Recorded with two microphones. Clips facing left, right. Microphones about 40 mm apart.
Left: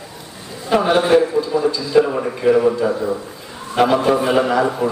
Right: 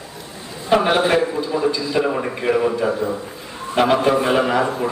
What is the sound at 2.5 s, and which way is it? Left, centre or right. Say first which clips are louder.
Speech: left 2 dB; centre.